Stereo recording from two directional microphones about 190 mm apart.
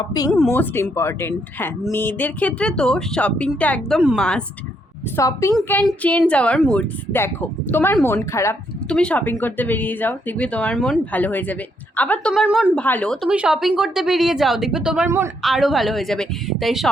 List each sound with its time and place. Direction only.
0.0 s speech: 20° left (ahead or behind)
0.3 s speech: 5° left (ahead or behind)
5.1 s speech: 15° left (ahead or behind); by 12.7 s 5° right (ahead or behind)
12.7 s speech: 5° left (ahead or behind); by 15.3 s 15° right (ahead or behind)
15.4 s speech: centre (ahead or behind)